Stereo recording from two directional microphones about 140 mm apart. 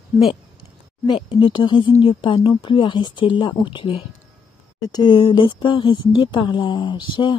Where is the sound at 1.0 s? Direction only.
35° left (ahead or behind).